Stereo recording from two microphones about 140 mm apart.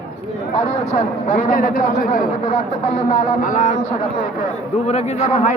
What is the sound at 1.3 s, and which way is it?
A man's voice, 65° left (ahead or behind).